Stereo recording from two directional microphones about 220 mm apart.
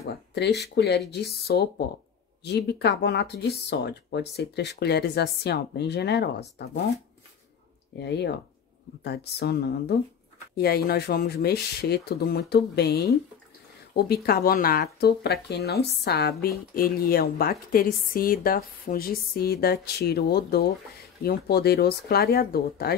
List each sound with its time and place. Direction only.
0.0 s speech: 50° left (ahead or behind)
8.0 s speech: 50° left (ahead or behind)